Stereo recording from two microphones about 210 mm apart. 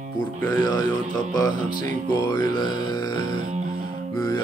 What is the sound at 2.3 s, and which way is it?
Speech, 20° left (ahead or behind).